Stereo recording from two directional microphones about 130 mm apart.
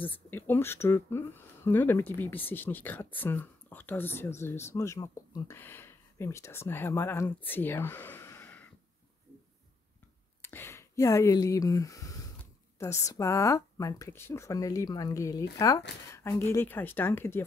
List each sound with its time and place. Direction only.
0.0 s speech: 15° left (ahead or behind)
10.4 s speech: 20° left (ahead or behind)